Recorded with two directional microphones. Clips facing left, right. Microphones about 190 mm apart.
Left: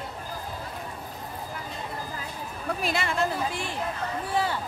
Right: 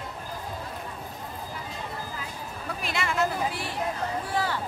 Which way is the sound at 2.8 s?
35° left (ahead or behind).